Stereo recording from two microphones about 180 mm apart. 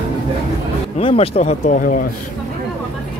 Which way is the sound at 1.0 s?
30° left (ahead or behind).